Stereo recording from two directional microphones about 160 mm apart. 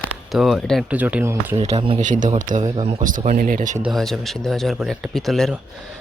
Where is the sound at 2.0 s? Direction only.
50° right (ahead or behind).